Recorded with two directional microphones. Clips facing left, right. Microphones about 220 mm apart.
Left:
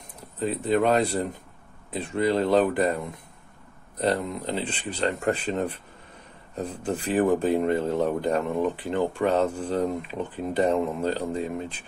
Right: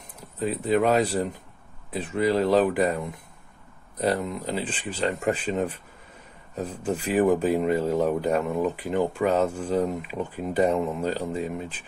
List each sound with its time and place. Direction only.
0.4 s speech: 5° right (ahead or behind)
4.0 s a man's voice: 5° right (ahead or behind)